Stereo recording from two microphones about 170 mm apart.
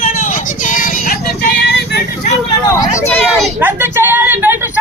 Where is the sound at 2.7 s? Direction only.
15° left (ahead or behind).